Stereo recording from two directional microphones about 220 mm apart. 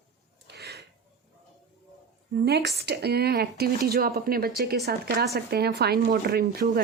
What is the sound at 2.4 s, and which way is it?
Speech, 45° right (ahead or behind).